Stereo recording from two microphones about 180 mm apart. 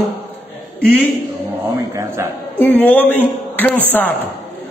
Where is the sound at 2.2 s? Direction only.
15° right (ahead or behind).